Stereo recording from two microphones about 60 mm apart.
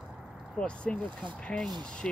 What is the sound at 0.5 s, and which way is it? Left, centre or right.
Speech, centre.